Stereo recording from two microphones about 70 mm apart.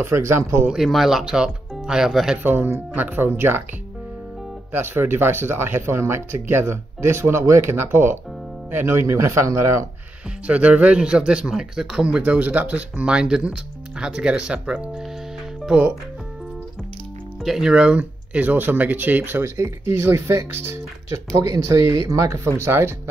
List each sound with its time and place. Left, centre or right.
0.0 s speech: right
0.7 s speech: centre
2.4 s speech: right
4.7 s speech: right
9.0 s speech: right
10.4 s speech: centre
12.2 s speech: right
17.4 s speech: centre; by 22.9 s right